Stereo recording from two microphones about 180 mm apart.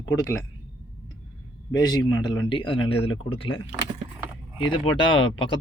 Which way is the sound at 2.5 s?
30° left (ahead or behind).